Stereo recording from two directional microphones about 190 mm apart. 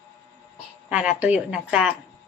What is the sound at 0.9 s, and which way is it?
A woman's voice, 5° right (ahead or behind).